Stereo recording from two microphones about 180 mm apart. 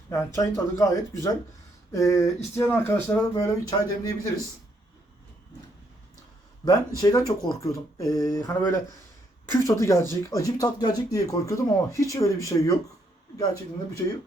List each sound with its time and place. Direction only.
0.1 s speech: 15° left (ahead or behind)
6.7 s speech: 20° left (ahead or behind)